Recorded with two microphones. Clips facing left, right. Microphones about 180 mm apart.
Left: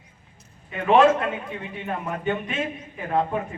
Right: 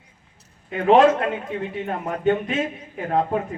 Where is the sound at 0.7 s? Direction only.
35° right (ahead or behind).